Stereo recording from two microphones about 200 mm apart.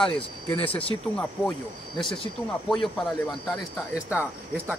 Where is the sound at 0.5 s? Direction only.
30° left (ahead or behind).